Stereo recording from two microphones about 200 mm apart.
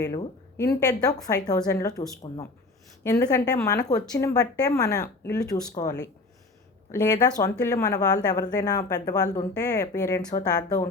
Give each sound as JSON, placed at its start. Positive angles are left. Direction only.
{"t": 0.1, "sound": "speech", "side_deg": 15}